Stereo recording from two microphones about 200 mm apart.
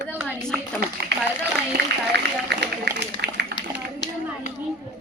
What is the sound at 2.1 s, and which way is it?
A man's voice, 55° right (ahead or behind).